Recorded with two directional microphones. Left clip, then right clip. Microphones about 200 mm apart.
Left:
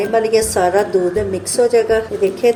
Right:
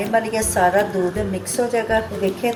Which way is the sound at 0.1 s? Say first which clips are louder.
Left 4 dB; 50° left (ahead or behind).